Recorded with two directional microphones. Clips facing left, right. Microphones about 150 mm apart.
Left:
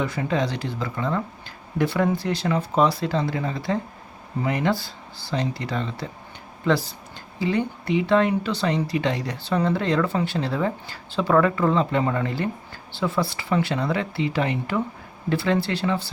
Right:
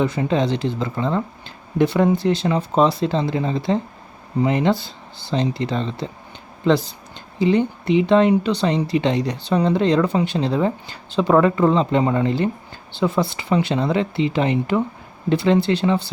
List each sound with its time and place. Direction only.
0.0 s speech: 25° right (ahead or behind)